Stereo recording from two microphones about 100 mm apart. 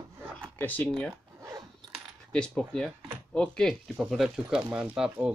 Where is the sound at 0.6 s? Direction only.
20° left (ahead or behind).